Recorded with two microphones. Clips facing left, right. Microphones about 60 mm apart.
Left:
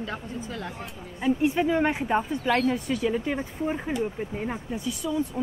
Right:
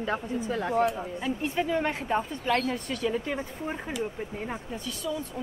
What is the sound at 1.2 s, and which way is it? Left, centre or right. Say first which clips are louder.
Speech: left 7 dB; centre.